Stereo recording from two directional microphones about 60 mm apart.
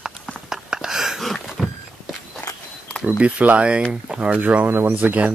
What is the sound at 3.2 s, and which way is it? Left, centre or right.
Speech, right.